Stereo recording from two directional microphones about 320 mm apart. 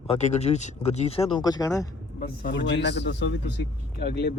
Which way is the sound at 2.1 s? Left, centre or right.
Left.